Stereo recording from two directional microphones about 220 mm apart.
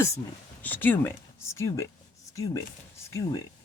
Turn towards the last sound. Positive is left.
turn(degrees=15)  # may be behind; listen again after turning